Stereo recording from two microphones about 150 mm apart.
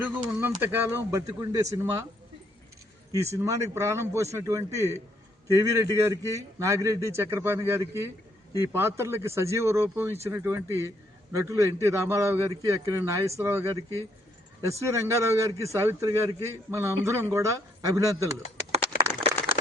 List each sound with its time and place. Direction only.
0.0 s speech: 15° right (ahead or behind)
3.1 s speech: 20° right (ahead or behind)